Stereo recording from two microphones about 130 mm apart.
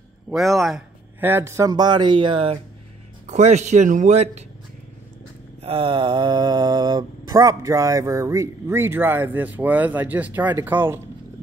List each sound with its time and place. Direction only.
0.3 s speech: centre (ahead or behind)
1.2 s speech: 20° right (ahead or behind); by 2.6 s 45° right (ahead or behind)
3.3 s speech: 60° right (ahead or behind)
5.6 s mantra: 45° right (ahead or behind); by 11.0 s 15° right (ahead or behind)